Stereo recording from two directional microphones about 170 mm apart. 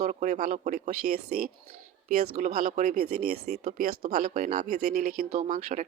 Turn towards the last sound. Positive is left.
turn(degrees=-50)  # may be behind; listen again after turning